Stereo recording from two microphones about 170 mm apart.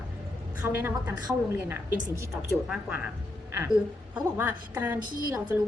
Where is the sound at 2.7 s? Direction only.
10° right (ahead or behind).